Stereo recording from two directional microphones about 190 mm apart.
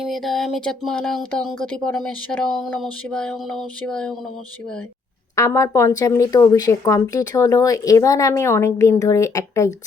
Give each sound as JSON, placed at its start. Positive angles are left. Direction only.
{"t": 0.0, "sound": "speech", "side_deg": 0}
{"t": 5.4, "sound": "speech", "side_deg": 15}